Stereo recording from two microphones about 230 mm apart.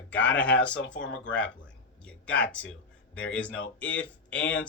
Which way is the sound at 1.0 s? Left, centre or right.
Left.